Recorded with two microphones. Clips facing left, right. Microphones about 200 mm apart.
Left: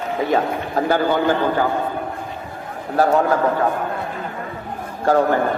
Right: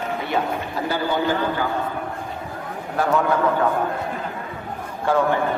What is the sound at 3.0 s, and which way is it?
Speech, 35° left (ahead or behind).